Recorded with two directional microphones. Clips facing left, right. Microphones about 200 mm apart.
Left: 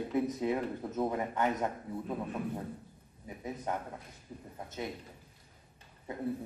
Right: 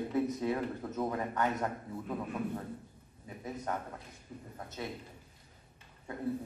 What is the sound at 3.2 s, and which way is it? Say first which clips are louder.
A man's voice: left 1 dB; 15° left (ahead or behind).